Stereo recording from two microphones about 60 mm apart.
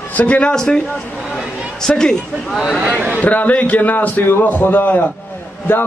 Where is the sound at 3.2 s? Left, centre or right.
Left.